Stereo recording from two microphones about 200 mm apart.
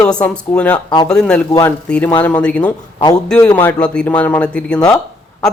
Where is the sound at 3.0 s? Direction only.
20° left (ahead or behind).